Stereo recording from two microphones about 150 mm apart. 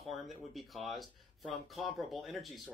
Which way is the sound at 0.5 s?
Centre (ahead or behind).